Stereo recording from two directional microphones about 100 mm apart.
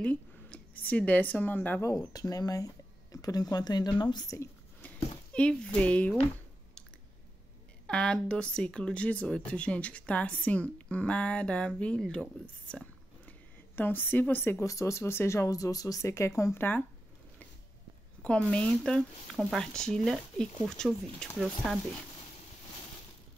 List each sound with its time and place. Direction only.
0.0 s speech: 15° left (ahead or behind)
1.8 s speech: 35° left (ahead or behind)
4.8 s speech: 10° left (ahead or behind)
7.8 s speech: 10° left (ahead or behind)
18.2 s speech: 10° left (ahead or behind)